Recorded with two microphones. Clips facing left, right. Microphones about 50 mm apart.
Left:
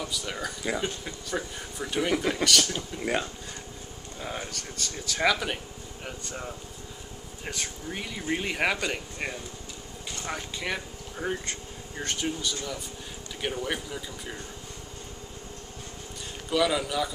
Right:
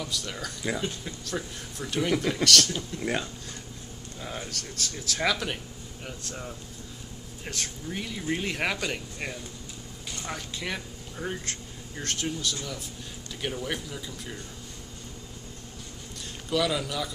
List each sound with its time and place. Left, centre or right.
0.0 s speech: centre
16.4 s speech: centre